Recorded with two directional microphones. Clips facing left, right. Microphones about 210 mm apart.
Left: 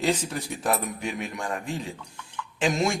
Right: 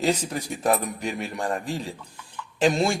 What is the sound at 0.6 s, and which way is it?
Speech, 35° right (ahead or behind).